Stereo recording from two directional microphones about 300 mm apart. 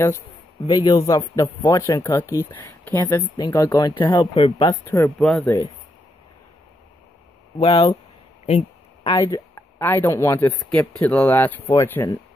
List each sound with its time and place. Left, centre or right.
0.7 s speech: centre
7.5 s speech: centre
8.5 s a sound: left
9.1 s speech: centre